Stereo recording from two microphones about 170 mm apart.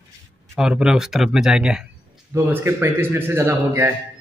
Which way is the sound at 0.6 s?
5° right (ahead or behind).